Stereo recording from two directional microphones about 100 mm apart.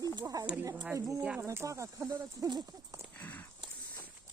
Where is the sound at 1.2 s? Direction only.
10° right (ahead or behind).